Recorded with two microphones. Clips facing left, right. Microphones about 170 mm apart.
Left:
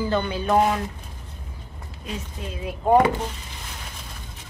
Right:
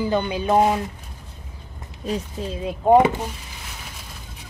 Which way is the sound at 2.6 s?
20° right (ahead or behind).